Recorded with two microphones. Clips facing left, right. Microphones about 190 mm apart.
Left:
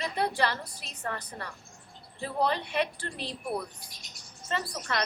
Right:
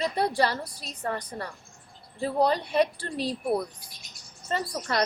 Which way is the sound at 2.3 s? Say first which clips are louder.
Right 5 dB; 40° right (ahead or behind).